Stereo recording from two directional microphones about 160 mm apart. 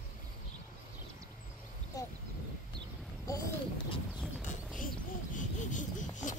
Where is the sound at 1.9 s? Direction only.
20° left (ahead or behind).